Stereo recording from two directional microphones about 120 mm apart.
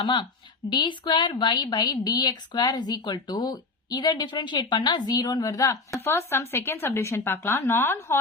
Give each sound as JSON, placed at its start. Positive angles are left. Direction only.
{"t": 0.0, "sound": "a woman's voice", "side_deg": 40}